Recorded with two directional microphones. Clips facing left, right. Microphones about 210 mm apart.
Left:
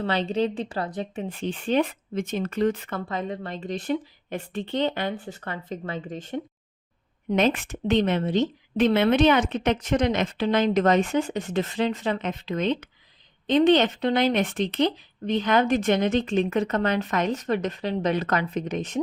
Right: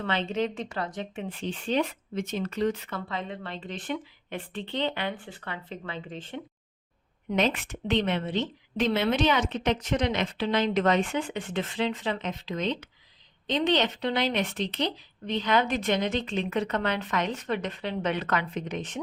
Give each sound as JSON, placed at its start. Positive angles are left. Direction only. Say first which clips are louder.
{"t": 0.0, "sound": "a woman's voice", "louder": "left 4 dB", "side_deg": 35}